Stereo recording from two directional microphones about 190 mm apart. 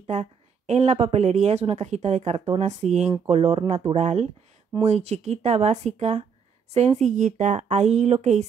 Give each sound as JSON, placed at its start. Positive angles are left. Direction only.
{"t": 0.0, "sound": "a woman's voice", "side_deg": -35}